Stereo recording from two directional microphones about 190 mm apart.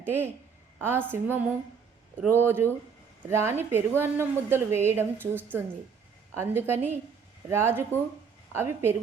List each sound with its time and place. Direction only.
0.0 s a woman's voice: 10° right (ahead or behind)